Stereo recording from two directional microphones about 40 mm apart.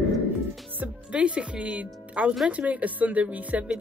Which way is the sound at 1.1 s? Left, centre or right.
Right.